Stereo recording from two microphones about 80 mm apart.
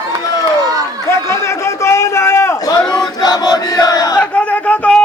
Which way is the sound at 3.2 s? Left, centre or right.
Left.